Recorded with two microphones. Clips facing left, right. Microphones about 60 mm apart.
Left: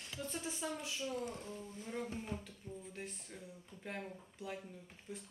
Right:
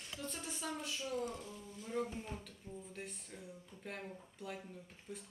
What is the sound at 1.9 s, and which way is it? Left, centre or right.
Speech, centre.